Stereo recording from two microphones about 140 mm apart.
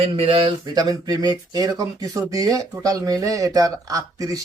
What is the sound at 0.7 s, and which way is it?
Speech, 25° right (ahead or behind).